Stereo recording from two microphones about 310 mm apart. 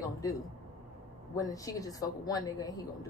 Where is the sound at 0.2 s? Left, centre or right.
Centre.